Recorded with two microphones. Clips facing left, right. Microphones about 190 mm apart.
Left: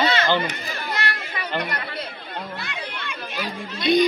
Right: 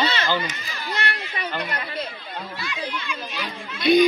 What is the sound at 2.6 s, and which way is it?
Chatter, 60° left (ahead or behind).